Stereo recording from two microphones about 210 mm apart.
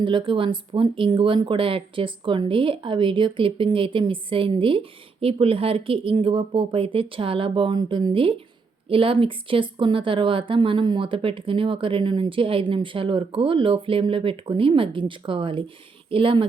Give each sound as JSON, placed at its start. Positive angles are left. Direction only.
{"t": 0.0, "sound": "speech", "side_deg": -25}